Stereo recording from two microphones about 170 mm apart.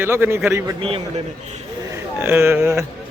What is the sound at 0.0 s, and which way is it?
Speech, 15° right (ahead or behind).